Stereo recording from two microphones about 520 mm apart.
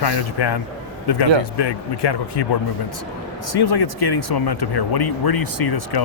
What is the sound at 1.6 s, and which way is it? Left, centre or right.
Speech, left.